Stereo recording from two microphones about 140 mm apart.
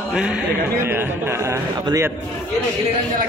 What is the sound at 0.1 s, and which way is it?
A man's voice, 5° right (ahead or behind).